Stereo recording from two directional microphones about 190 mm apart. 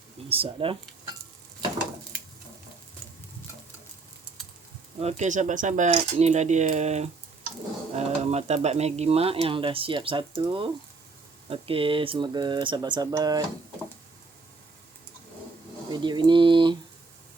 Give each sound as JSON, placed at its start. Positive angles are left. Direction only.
{"t": 0.3, "sound": "speech", "side_deg": -30}
{"t": 4.9, "sound": "speech", "side_deg": -35}
{"t": 15.9, "sound": "a sound", "side_deg": -25}